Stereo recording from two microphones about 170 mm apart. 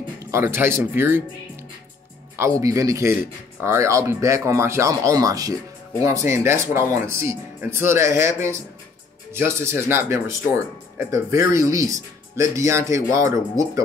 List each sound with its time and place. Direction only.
0.2 s speech: 15° right (ahead or behind)
2.6 s speech: 20° right (ahead or behind)